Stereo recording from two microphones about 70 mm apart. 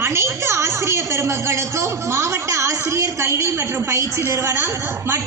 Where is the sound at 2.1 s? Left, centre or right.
Right.